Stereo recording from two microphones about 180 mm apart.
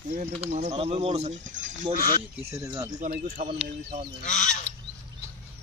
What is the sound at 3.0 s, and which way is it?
Speech, 45° right (ahead or behind).